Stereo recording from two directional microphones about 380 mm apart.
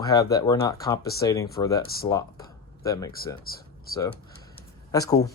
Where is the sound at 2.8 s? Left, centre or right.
Centre.